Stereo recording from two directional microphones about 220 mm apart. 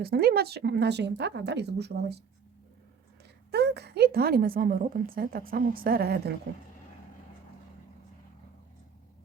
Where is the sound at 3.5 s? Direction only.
50° right (ahead or behind).